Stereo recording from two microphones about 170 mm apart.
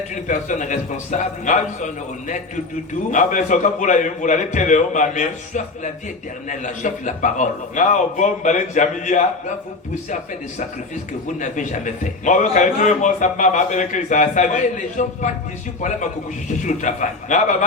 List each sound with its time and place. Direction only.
0.1 s a man's voice: 45° left (ahead or behind)
11.3 s a man's voice: 45° left (ahead or behind)
16.5 s a man's voice: 45° left (ahead or behind)